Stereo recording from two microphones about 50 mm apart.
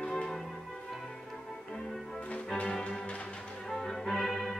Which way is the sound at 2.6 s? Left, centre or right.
Centre.